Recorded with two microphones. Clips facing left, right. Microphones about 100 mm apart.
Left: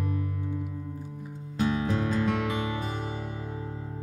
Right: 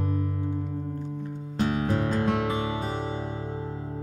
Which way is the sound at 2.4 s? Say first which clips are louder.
Right 2 dB; 25° right (ahead or behind).